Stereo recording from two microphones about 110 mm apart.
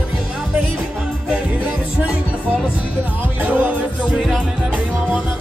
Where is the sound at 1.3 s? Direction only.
10° right (ahead or behind).